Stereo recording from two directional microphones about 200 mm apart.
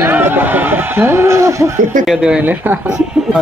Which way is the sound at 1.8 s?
40° right (ahead or behind).